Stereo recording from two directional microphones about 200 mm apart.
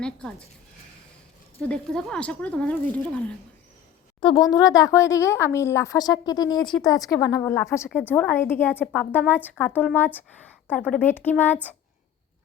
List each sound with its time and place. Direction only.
0.0 s speech: 5° left (ahead or behind)
1.6 s speech: 5° left (ahead or behind)
4.2 s speech: 25° left (ahead or behind)